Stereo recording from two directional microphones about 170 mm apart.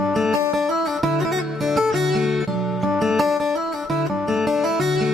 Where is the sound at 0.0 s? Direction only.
Centre (ahead or behind).